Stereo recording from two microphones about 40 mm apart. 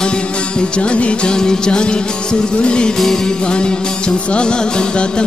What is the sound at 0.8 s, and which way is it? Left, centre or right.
Music, left.